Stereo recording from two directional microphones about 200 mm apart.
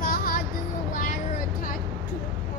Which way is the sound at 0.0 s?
45° left (ahead or behind).